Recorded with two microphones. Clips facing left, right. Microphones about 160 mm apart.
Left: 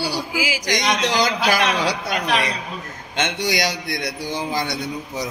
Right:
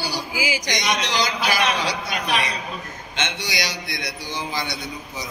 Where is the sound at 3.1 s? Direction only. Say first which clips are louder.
Left 6 dB; 50° left (ahead or behind).